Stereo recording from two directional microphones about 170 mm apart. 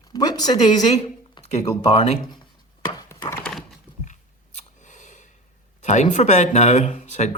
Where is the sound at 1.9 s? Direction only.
35° left (ahead or behind).